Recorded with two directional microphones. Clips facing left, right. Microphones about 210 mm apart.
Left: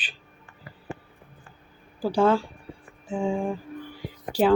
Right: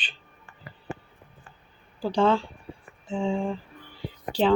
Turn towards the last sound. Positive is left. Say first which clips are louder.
# left 2 dB
turn(degrees=10)  # may be behind; listen again after turning